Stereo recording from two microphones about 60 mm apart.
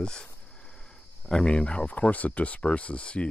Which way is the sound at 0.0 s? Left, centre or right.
Centre.